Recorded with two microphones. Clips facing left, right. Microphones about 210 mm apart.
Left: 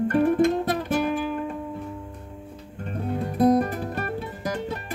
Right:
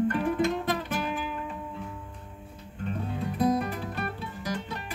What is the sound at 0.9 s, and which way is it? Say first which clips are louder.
Music: left 7 dB; 45° left (ahead or behind).